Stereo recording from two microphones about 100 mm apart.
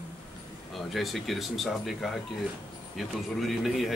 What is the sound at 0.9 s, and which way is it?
Speech, centre (ahead or behind).